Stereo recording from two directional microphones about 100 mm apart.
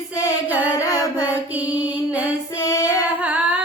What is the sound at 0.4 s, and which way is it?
Singing, 15° right (ahead or behind).